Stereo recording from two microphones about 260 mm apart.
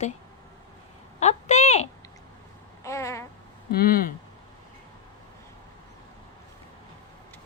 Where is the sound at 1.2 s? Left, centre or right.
Left.